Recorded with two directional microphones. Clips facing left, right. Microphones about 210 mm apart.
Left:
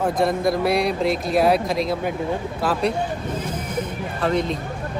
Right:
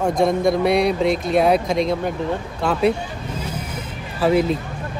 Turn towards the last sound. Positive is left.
turn(degrees=-5)  # may be behind; listen again after turning